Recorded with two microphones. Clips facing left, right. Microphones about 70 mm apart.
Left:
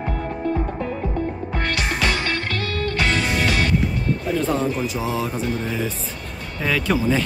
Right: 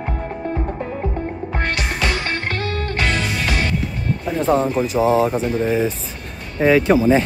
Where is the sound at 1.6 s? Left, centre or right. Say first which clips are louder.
Right 1 dB; right.